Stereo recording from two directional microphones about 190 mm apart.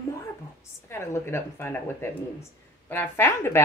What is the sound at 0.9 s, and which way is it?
A woman's voice, 15° left (ahead or behind).